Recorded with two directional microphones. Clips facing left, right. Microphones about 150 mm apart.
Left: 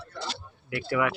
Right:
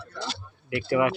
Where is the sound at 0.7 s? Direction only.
20° right (ahead or behind).